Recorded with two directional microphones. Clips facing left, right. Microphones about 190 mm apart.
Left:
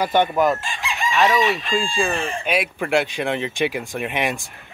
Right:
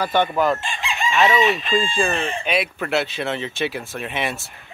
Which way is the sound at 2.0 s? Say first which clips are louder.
Even; 5° left (ahead or behind).